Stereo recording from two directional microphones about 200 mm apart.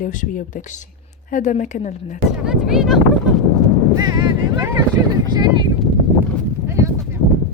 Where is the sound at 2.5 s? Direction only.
Centre (ahead or behind).